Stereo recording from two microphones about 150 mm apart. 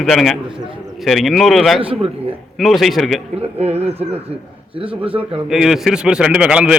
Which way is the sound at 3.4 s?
40° right (ahead or behind).